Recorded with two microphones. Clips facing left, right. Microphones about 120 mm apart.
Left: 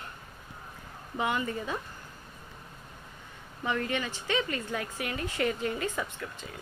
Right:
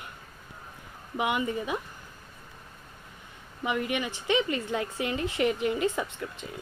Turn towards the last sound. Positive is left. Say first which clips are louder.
# right 3 dB
turn(degrees=-20)  # may be behind; listen again after turning